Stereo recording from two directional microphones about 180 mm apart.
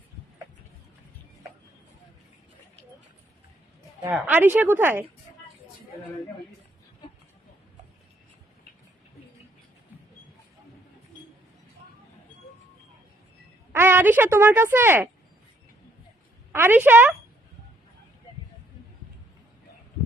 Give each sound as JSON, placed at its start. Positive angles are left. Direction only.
{"t": 4.0, "sound": "a woman's voice", "side_deg": -10}
{"t": 13.7, "sound": "speech", "side_deg": -10}
{"t": 16.5, "sound": "a woman's voice", "side_deg": -10}